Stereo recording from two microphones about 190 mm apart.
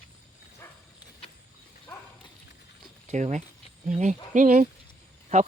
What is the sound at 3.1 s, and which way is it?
Speech, 40° right (ahead or behind).